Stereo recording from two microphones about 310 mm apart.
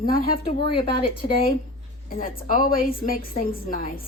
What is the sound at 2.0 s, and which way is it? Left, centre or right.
Speech, left.